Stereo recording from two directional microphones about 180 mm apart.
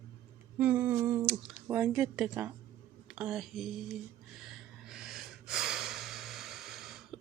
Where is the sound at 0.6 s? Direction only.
10° right (ahead or behind).